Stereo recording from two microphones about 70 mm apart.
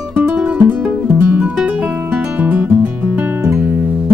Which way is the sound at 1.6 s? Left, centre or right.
Centre.